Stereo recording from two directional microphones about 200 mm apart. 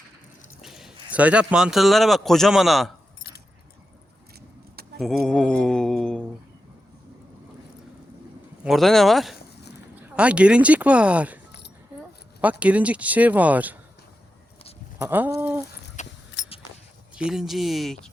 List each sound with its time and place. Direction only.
0.6 s speech: centre (ahead or behind)
4.9 s speech: centre (ahead or behind)
8.6 s speech: centre (ahead or behind)
11.9 s a sound: 5° right (ahead or behind)
12.4 s speech: 5° right (ahead or behind)
14.9 s speech: 10° right (ahead or behind)
16.0 s a sound: 35° left (ahead or behind)
16.4 s a sound: 60° left (ahead or behind)
17.2 s speech: 5° right (ahead or behind)